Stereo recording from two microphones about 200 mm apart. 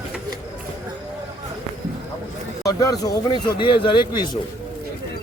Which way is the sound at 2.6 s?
15° left (ahead or behind).